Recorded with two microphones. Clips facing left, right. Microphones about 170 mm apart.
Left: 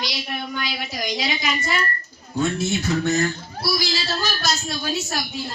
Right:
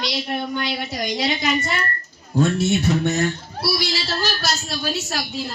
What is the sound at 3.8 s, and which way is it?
Music, 70° right (ahead or behind).